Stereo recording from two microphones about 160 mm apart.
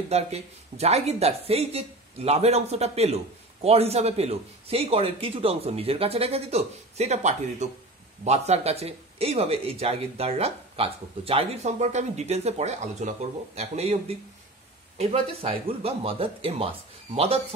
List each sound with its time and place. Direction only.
0.1 s speech: 40° right (ahead or behind)